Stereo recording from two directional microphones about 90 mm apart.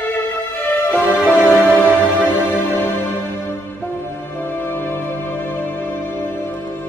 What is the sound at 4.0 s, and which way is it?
Music, 20° left (ahead or behind).